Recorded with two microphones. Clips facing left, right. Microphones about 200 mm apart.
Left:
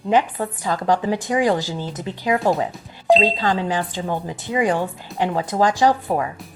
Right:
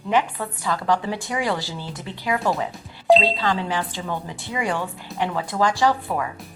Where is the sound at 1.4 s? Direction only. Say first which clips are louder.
Left 6 dB; 45° left (ahead or behind).